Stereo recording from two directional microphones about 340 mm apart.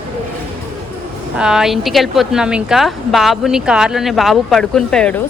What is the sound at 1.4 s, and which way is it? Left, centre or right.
Speech, centre.